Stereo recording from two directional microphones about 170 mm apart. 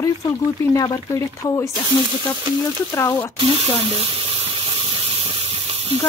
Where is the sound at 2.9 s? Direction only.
15° left (ahead or behind).